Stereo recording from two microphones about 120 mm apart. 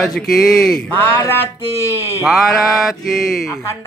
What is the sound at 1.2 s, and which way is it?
Music, 20° left (ahead or behind).